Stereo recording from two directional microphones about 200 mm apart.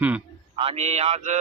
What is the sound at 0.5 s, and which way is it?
Speech, 30° right (ahead or behind).